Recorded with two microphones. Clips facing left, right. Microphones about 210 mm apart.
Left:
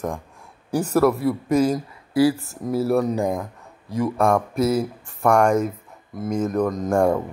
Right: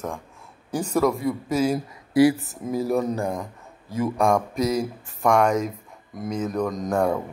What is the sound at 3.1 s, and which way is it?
Speech, 15° left (ahead or behind).